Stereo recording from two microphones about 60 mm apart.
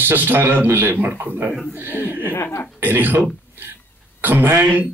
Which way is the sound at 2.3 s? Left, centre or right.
Left.